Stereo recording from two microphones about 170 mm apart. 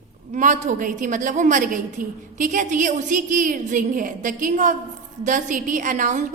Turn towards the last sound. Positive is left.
turn(degrees=-50)  # may be behind; listen again after turning